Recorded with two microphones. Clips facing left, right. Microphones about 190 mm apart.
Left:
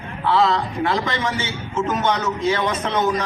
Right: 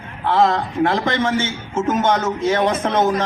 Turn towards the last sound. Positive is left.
turn(degrees=-50)  # may be behind; listen again after turning